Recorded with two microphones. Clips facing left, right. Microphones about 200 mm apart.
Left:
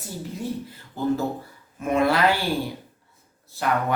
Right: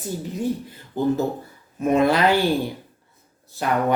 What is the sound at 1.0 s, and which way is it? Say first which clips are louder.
Speech: right 3 dB; 20° right (ahead or behind).